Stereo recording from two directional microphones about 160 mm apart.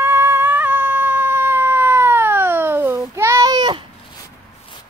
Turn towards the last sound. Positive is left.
turn(degrees=-30)  # may be behind; listen again after turning